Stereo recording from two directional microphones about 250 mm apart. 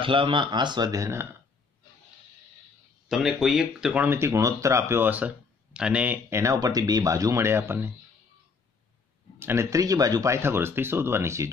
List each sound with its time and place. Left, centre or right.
0.0 s speech: right
3.1 s speech: centre
9.4 s speech: centre